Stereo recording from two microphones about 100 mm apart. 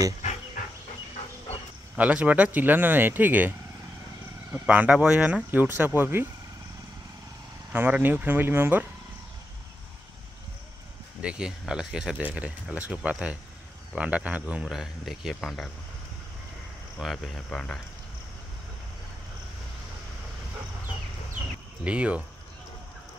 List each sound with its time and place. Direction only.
2.0 s speech: 15° right (ahead or behind)
7.7 s speech: 15° right (ahead or behind)
11.1 s speech: 10° right (ahead or behind)
17.0 s speech: 5° left (ahead or behind)
21.8 s speech: 10° right (ahead or behind)